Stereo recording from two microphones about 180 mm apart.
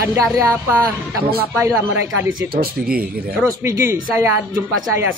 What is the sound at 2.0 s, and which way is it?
Speech, 75° right (ahead or behind).